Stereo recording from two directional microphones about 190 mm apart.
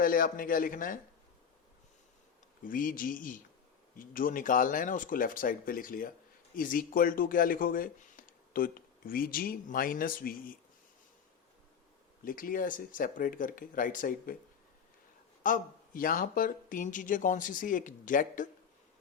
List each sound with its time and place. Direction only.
0.0 s speech: 45° left (ahead or behind)
2.6 s speech: 45° left (ahead or behind)
12.2 s speech: 45° left (ahead or behind)
15.4 s speech: 45° left (ahead or behind)